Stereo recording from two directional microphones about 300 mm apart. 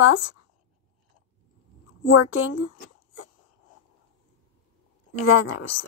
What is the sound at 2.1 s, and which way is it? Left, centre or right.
Speech, left.